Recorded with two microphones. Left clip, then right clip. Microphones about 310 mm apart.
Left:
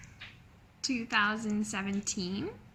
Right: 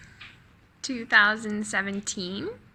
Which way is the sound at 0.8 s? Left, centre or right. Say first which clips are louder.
Right 1 dB; right.